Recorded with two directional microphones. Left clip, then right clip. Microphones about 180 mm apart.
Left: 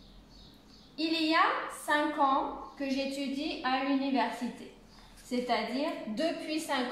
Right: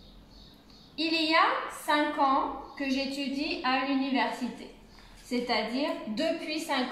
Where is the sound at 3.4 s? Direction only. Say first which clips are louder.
Right 4 dB; 15° left (ahead or behind).